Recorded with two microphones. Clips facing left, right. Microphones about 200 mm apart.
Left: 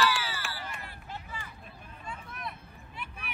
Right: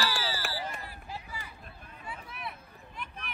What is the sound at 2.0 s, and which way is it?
Vehicle, 10° right (ahead or behind).